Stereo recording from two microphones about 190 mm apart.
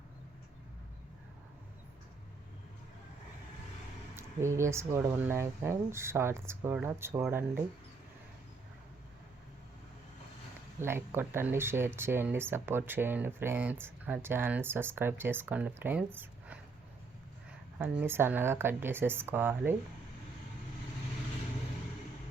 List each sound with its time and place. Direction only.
4.2 s speech: 15° right (ahead or behind)
10.8 s speech: 10° right (ahead or behind)
17.7 s speech: 10° right (ahead or behind)